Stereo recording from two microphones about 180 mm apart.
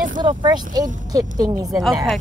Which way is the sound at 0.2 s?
25° right (ahead or behind).